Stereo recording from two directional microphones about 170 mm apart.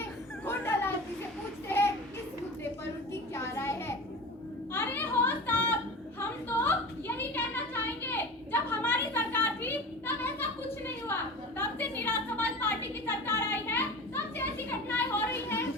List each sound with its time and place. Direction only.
0.4 s children playing: 15° left (ahead or behind)
1.6 s child singing: 15° left (ahead or behind)
3.1 s a sound: 15° left (ahead or behind)